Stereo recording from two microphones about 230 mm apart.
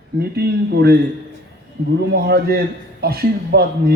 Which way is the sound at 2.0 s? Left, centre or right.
Right.